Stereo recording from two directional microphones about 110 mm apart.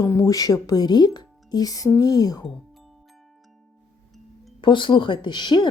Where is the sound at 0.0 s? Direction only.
30° left (ahead or behind).